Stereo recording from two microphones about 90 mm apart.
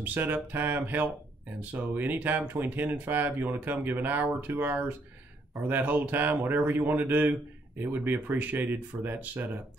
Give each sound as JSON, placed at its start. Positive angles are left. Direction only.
{"t": 0.0, "sound": "speech", "side_deg": -20}